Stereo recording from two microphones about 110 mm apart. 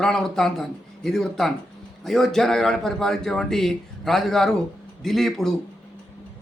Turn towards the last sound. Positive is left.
turn(degrees=5)  # may be behind; listen again after turning